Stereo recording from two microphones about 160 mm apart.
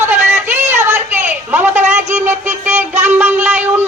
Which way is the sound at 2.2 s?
15° right (ahead or behind).